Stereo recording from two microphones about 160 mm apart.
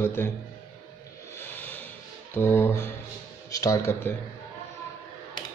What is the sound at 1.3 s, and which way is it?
Music, 10° left (ahead or behind).